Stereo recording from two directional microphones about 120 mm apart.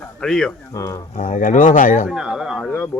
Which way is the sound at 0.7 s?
25° left (ahead or behind).